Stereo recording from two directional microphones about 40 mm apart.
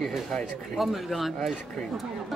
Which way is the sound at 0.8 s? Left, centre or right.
Centre.